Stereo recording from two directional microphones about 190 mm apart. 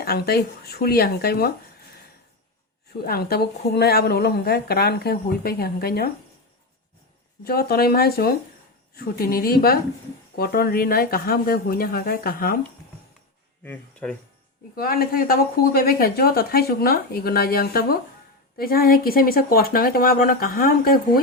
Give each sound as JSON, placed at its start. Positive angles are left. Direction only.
{"t": 0.0, "sound": "speech", "side_deg": 55}
{"t": 3.0, "sound": "speech", "side_deg": 55}
{"t": 7.4, "sound": "speech", "side_deg": 55}
{"t": 13.7, "sound": "speech", "side_deg": 5}
{"t": 14.8, "sound": "speech", "side_deg": 50}